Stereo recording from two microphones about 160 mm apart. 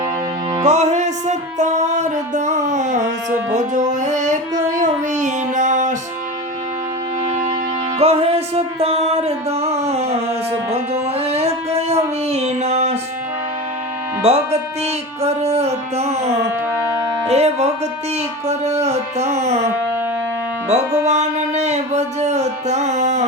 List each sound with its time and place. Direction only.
0.6 s music: 45° right (ahead or behind)
7.9 s music: 40° right (ahead or behind)
11.2 s a sound: 40° right (ahead or behind)
14.2 s speech: 40° right (ahead or behind)
17.2 s music: 40° right (ahead or behind)
21.1 s music: 45° right (ahead or behind)